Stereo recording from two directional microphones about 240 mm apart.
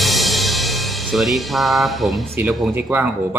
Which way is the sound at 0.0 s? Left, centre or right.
Centre.